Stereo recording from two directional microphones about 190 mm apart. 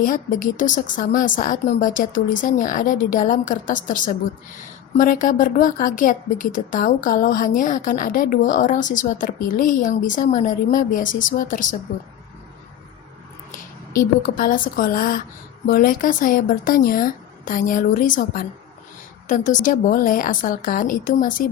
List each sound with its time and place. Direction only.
0.0 s speech: 45° left (ahead or behind)
13.9 s speech: 45° left (ahead or behind)